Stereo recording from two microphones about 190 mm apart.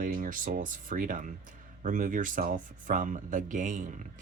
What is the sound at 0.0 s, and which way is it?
Speech, 45° right (ahead or behind).